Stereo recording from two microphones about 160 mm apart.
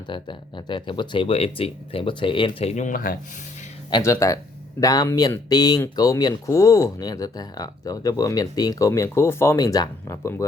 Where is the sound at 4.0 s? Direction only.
20° left (ahead or behind).